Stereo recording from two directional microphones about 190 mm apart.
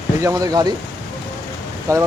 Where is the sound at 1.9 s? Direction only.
15° right (ahead or behind).